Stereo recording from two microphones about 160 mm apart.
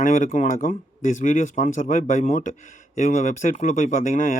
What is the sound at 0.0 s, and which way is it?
Speech, 55° left (ahead or behind).